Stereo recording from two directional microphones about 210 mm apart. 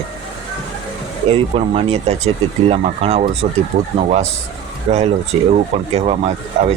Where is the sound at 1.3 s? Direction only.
30° right (ahead or behind).